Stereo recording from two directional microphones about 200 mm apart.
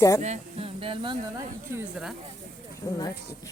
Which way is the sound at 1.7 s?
5° right (ahead or behind).